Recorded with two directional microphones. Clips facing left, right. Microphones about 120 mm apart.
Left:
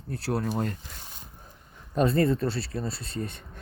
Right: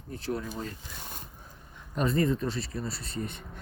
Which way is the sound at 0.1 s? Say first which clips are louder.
Left 4 dB; 70° left (ahead or behind).